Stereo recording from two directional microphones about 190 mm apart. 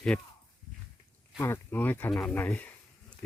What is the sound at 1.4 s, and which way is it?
Speech, 10° left (ahead or behind).